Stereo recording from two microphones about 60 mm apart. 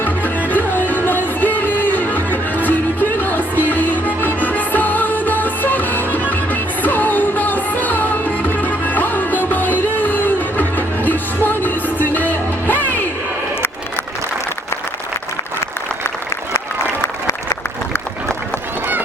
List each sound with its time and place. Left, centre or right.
0.5 s music: left